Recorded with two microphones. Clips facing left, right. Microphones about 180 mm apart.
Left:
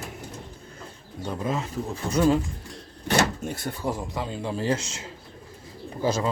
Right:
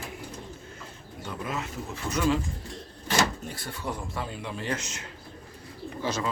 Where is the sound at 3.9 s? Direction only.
25° left (ahead or behind).